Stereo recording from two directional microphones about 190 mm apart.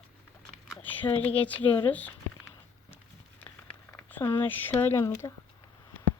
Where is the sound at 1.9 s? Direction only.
10° left (ahead or behind).